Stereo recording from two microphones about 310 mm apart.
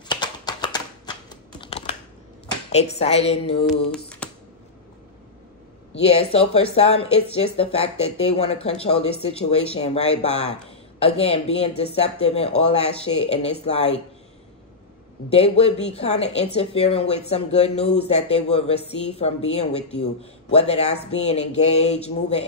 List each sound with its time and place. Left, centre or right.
0.1 s a sound: centre
1.6 s computer keyboard: centre
2.7 s speech: centre
3.9 s a sound: centre
5.9 s speech: centre
15.2 s speech: centre